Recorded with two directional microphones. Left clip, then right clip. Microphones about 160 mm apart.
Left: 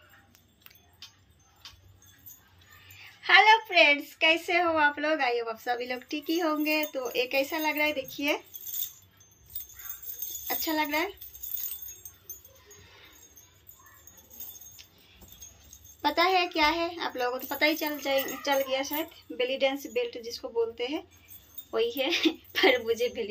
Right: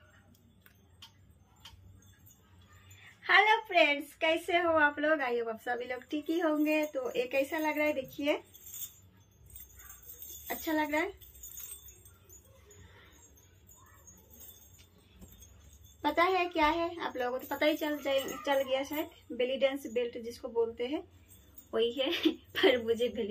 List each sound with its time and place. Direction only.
3.0 s a woman's voice: 10° right (ahead or behind)
10.4 s speech: 15° right (ahead or behind)
16.0 s a woman's voice: 15° right (ahead or behind)